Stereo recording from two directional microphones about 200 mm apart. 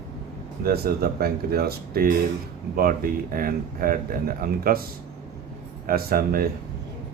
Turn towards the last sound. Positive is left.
turn(degrees=-50)  # may be behind; listen again after turning